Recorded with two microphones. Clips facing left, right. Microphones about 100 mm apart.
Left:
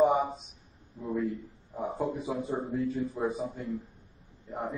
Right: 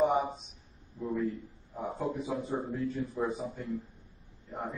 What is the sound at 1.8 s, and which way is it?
A man's voice, 15° left (ahead or behind).